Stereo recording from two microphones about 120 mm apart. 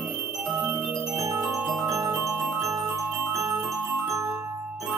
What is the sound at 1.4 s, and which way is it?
Marimba, 10° right (ahead or behind).